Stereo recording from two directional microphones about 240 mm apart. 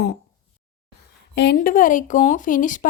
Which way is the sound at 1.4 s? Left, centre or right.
Left.